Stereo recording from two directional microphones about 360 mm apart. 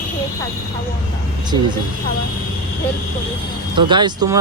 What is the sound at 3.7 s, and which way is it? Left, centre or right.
Speech, centre.